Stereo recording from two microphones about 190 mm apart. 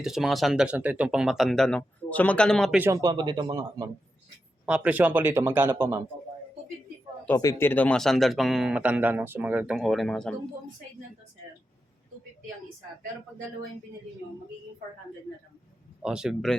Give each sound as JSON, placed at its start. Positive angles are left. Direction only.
{"t": 0.0, "sound": "speech", "side_deg": 0}
{"t": 2.7, "sound": "speech", "side_deg": -10}
{"t": 3.0, "sound": "speech", "side_deg": -20}
{"t": 4.6, "sound": "speech", "side_deg": -5}
{"t": 7.3, "sound": "speech", "side_deg": 15}
{"t": 16.0, "sound": "speech", "side_deg": -5}